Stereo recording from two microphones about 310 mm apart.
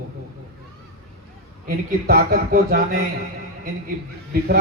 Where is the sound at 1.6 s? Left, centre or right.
Right.